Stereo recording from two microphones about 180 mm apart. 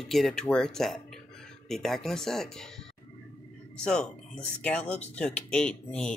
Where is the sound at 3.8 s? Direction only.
5° left (ahead or behind).